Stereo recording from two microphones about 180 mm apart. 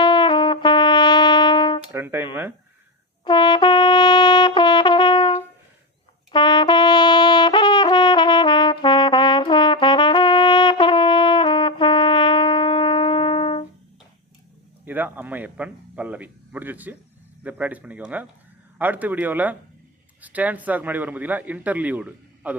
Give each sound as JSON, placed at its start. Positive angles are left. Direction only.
{"t": 0.0, "sound": "trumpet", "side_deg": 25}
{"t": 1.9, "sound": "music", "side_deg": -10}
{"t": 3.2, "sound": "brass instrument", "side_deg": 25}
{"t": 14.8, "sound": "speech", "side_deg": -10}